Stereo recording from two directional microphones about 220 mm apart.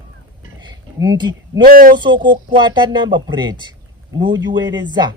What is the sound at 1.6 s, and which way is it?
Speech, 40° right (ahead or behind).